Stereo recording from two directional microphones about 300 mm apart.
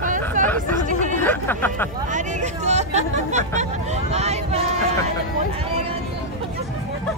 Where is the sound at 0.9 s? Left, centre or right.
Right.